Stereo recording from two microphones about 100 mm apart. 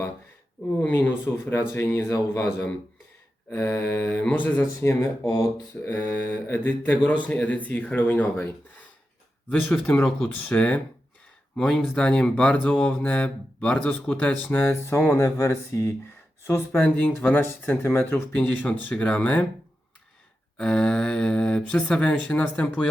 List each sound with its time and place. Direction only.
0.8 s speech: 20° left (ahead or behind)
5.0 s speech: 40° left (ahead or behind)
5.8 s speech: 20° left (ahead or behind)
10.0 s speech: 5° left (ahead or behind)
20.6 s speech: 10° left (ahead or behind)